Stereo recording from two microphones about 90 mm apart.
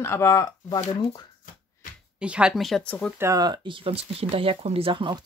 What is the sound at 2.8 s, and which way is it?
Speech, 15° left (ahead or behind).